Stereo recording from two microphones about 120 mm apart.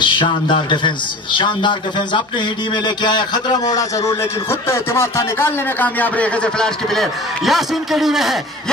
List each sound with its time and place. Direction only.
0.0 s a man's voice: 45° left (ahead or behind); by 8.7 s centre (ahead or behind)